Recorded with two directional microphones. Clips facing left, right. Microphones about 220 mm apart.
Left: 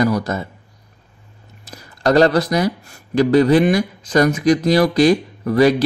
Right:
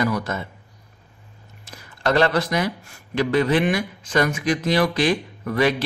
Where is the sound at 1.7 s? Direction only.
40° left (ahead or behind).